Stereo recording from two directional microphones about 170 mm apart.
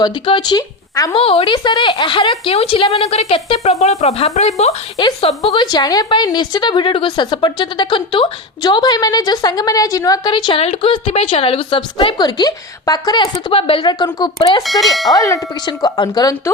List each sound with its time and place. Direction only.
0.0 s speech: 25° left (ahead or behind)
1.1 s speech: 35° left (ahead or behind)
4.9 s a woman's voice: 25° left (ahead or behind)
14.6 s clang: centre (ahead or behind)
15.1 s a woman's voice: 20° left (ahead or behind)